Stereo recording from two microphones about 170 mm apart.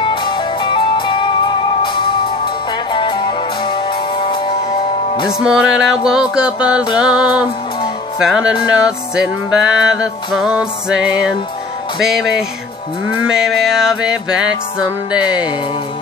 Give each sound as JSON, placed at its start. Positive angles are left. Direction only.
{"t": 0.0, "sound": "music", "side_deg": 25}
{"t": 5.4, "sound": "music", "side_deg": -5}